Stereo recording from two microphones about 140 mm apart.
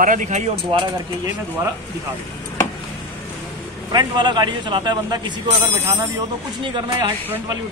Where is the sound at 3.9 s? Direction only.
30° right (ahead or behind).